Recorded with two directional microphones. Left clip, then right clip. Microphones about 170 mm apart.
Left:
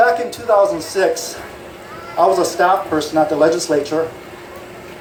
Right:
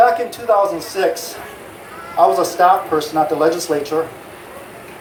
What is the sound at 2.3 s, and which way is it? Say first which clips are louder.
Speech: right 1 dB; 40° right (ahead or behind).